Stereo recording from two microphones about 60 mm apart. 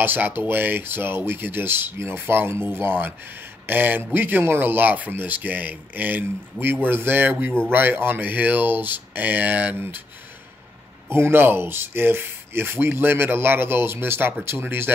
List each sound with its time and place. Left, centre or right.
0.0 s speech: right
11.1 s speech: right